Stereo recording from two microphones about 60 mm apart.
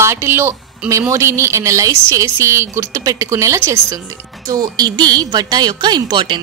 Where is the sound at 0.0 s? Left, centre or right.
Right.